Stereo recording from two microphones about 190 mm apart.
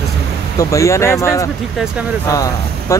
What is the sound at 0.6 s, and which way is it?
Speech, 15° left (ahead or behind).